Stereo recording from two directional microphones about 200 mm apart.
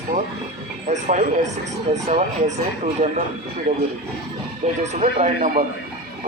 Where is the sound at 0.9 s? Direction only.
35° right (ahead or behind).